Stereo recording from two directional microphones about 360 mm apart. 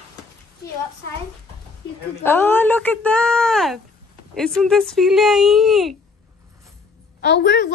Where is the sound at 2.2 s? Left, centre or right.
Centre.